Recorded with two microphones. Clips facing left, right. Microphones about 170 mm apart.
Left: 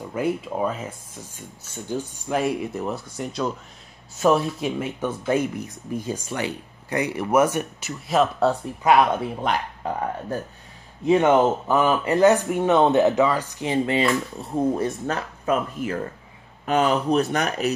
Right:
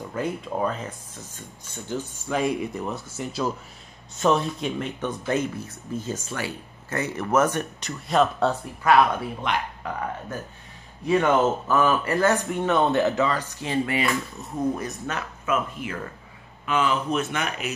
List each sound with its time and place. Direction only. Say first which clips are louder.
0.1 s speech: left 4 dB; 10° left (ahead or behind)
8.8 s speech: left 1 dB; 20° left (ahead or behind)
9.4 s speech: left 3 dB; 35° left (ahead or behind)
11.1 s speech: left 3 dB; 20° left (ahead or behind); by 17.7 s 40° left (ahead or behind)